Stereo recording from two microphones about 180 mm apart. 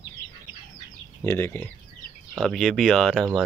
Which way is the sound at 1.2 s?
10° left (ahead or behind).